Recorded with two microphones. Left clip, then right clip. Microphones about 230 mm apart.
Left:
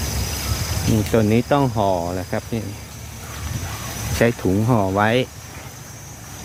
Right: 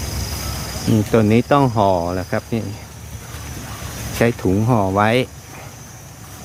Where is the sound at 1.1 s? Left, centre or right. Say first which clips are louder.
Right 3 dB; centre.